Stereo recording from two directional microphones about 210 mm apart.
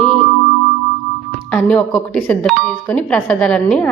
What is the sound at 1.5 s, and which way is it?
A woman's voice, 5° left (ahead or behind).